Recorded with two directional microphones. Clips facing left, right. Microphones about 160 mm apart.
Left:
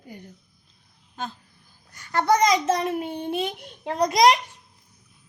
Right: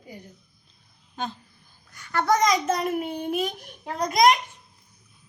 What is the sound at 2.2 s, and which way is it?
Child singing, 20° left (ahead or behind).